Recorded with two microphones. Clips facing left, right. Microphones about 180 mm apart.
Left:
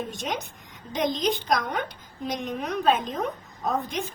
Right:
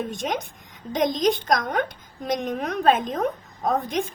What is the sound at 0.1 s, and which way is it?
A woman's voice, 50° right (ahead or behind).